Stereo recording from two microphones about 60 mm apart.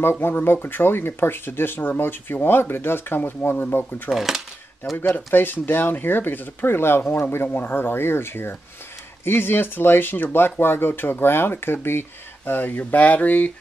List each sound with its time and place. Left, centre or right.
0.0 s speech: left
4.1 s speech: centre
4.9 s speech: left